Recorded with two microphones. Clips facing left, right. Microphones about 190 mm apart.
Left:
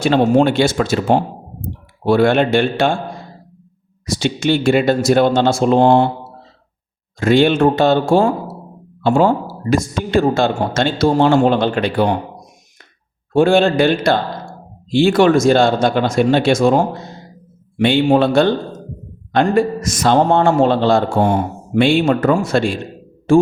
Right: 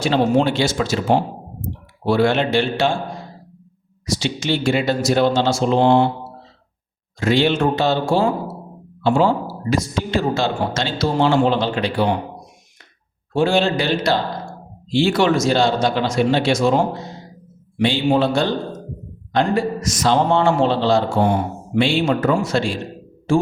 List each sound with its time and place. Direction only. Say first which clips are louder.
0.0 s speech: left 4 dB; 55° left (ahead or behind)
4.0 s a man's voice: left 5 dB; 55° left (ahead or behind)
7.2 s a man's voice: left 5 dB; 50° left (ahead or behind)
13.3 s a man's voice: left 5 dB; 55° left (ahead or behind)